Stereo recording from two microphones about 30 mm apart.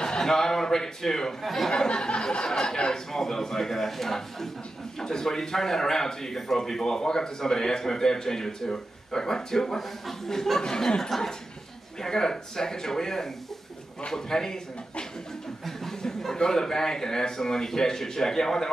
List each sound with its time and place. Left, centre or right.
0.0 s a man's voice: left
1.4 s speech: centre
1.7 s a sound: left
2.5 s a man's voice: left
9.8 s speech: centre
10.6 s a man's voice: left
15.6 s a sound: centre
16.3 s a man's voice: left